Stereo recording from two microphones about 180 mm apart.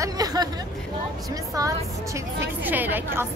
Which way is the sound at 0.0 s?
20° right (ahead or behind).